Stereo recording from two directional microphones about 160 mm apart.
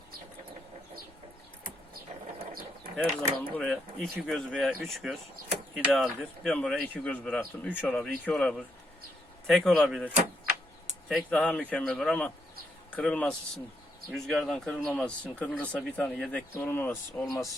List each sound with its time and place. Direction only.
2.5 s a sound: 65° right (ahead or behind)
3.0 s speech: 10° left (ahead or behind)
11.3 s speech: 5° left (ahead or behind)